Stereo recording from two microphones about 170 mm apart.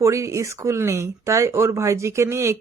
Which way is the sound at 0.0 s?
15° right (ahead or behind).